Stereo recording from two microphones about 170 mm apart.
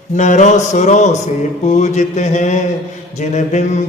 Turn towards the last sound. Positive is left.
turn(degrees=45)  # may be behind; listen again after turning